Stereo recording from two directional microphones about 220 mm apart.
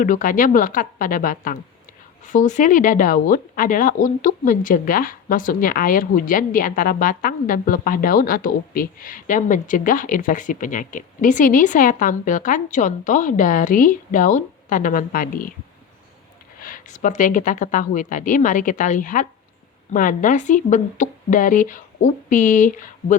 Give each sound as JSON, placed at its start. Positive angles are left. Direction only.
{"t": 0.0, "sound": "speech", "side_deg": 40}
{"t": 16.6, "sound": "speech", "side_deg": 40}